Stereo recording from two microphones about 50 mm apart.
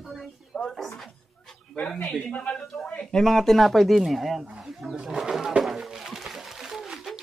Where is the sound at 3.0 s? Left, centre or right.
Centre.